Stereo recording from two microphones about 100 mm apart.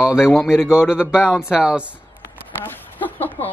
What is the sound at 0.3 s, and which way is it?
A man's voice, 5° right (ahead or behind).